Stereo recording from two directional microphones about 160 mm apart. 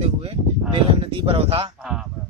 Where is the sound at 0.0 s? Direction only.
35° right (ahead or behind).